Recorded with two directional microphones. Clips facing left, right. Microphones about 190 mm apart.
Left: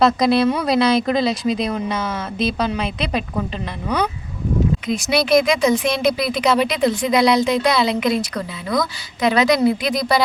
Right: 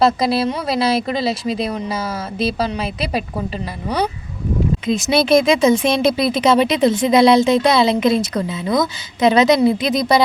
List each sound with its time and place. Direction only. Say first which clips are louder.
0.0 s speech: left 1 dB; centre (ahead or behind)
4.9 s speech: right 2 dB; 25° right (ahead or behind)